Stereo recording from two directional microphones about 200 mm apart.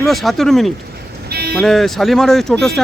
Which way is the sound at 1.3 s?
50° right (ahead or behind).